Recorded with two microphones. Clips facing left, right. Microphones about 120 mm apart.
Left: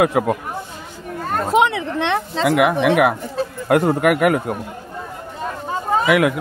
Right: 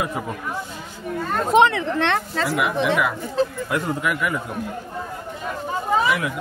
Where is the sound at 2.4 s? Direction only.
70° left (ahead or behind).